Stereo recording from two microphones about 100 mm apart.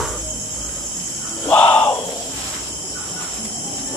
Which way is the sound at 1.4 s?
15° left (ahead or behind).